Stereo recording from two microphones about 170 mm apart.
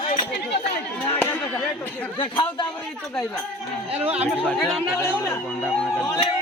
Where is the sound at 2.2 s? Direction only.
30° left (ahead or behind).